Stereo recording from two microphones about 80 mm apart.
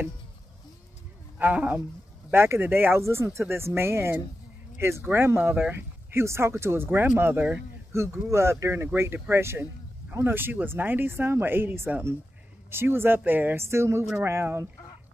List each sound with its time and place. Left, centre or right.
1.4 s speech: centre
2.3 s speech: right
6.2 s speech: right